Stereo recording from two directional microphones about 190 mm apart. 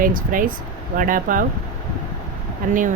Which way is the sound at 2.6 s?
45° right (ahead or behind).